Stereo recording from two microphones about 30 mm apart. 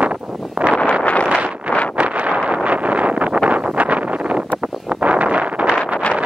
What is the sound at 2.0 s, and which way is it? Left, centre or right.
Wind noise, right.